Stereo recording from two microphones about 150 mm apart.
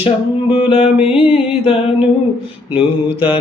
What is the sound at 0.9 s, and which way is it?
Music, 5° right (ahead or behind).